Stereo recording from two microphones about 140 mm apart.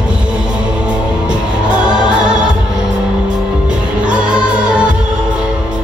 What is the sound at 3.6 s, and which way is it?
Music, 5° right (ahead or behind).